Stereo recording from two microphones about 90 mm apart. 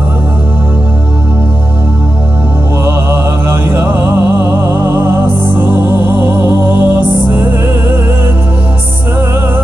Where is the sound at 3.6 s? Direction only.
25° right (ahead or behind).